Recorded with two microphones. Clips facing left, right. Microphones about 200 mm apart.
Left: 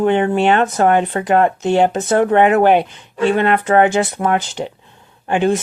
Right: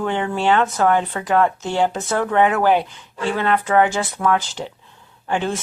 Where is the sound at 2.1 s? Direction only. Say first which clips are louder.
Left 6 dB; 60° left (ahead or behind).